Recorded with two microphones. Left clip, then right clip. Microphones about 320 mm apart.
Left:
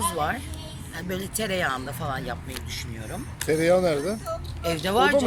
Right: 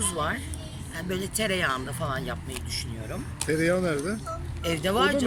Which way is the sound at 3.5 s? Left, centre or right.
Centre.